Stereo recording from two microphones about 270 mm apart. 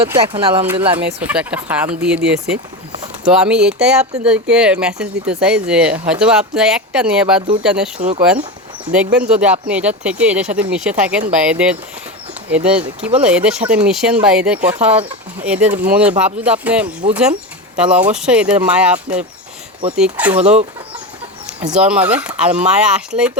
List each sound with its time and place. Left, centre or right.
0.0 s speech: centre
0.9 s speech: centre
7.9 s speech: right
9.1 s speech: centre
21.4 s speech: centre